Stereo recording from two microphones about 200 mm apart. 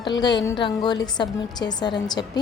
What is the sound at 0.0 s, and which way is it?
A woman's voice, 20° left (ahead or behind).